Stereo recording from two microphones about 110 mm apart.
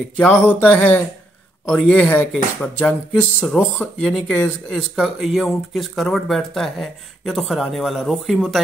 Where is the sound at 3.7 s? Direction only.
10° left (ahead or behind).